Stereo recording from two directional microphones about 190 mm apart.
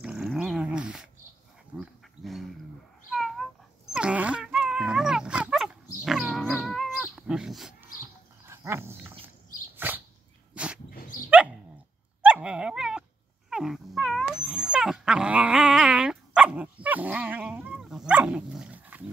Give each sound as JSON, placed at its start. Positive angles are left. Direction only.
{"t": 0.0, "sound": "dog", "side_deg": -5}
{"t": 1.8, "sound": "livestock", "side_deg": 0}
{"t": 3.1, "sound": "cat", "side_deg": 0}
{"t": 3.9, "sound": "dog", "side_deg": -5}
{"t": 8.5, "sound": "dog", "side_deg": -15}
{"t": 10.9, "sound": "dog", "side_deg": 45}
{"t": 11.2, "sound": "dog", "side_deg": -5}